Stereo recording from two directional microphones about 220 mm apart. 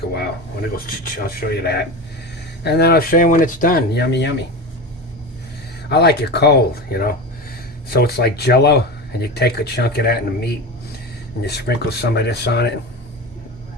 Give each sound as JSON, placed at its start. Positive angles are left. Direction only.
{"t": 1.0, "sound": "speech", "side_deg": 40}
{"t": 5.9, "sound": "speech", "side_deg": 50}